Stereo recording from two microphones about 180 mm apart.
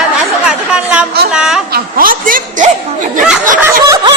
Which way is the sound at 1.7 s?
55° right (ahead or behind).